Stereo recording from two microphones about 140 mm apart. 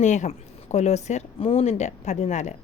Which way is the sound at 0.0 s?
60° left (ahead or behind).